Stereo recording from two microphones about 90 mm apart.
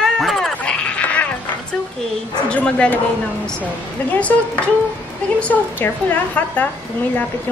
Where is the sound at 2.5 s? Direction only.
10° left (ahead or behind).